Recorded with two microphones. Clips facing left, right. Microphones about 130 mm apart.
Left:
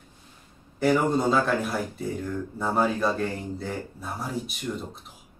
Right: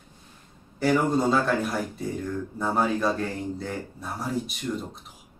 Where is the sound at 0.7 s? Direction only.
Centre (ahead or behind).